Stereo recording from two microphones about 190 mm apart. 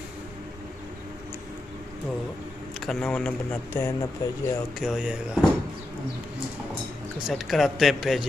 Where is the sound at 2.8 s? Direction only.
5° left (ahead or behind).